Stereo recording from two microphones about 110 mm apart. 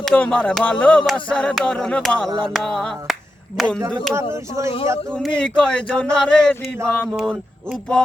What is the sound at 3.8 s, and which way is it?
Speech, 35° right (ahead or behind).